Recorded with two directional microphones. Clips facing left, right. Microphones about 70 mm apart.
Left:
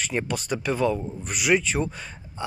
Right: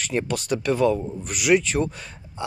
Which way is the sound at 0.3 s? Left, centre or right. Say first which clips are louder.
Right 3 dB; centre.